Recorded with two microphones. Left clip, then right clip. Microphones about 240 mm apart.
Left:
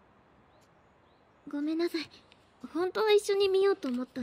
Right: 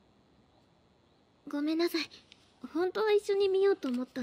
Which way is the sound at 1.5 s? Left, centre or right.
Centre.